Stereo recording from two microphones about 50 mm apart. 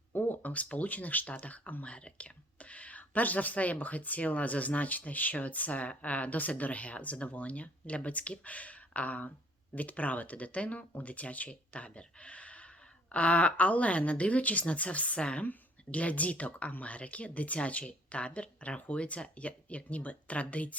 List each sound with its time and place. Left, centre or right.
0.1 s speech: left